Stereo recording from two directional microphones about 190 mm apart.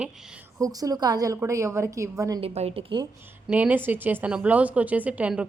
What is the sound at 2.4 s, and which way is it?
Speech, 30° right (ahead or behind).